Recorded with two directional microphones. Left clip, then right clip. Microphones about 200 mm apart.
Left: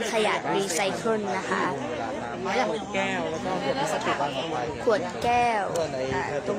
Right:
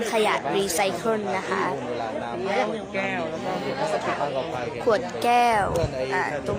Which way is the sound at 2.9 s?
20° left (ahead or behind).